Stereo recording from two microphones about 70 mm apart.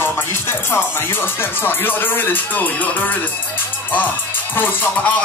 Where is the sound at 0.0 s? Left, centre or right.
Left.